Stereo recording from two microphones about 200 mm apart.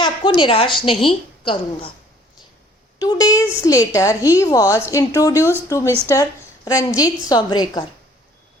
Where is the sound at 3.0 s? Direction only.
20° left (ahead or behind).